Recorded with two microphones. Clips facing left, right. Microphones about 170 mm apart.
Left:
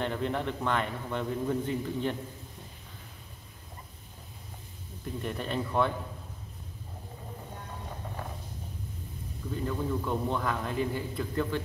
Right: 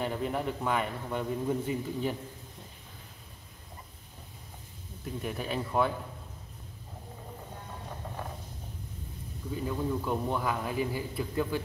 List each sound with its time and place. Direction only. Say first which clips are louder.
0.0 s a man's voice: even; 5° right (ahead or behind)
5.2 s speech: left 1 dB; 5° right (ahead or behind)
9.5 s a man's voice: even; 10° right (ahead or behind)